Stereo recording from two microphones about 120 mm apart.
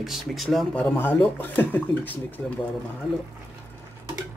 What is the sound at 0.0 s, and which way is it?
Speech, centre (ahead or behind).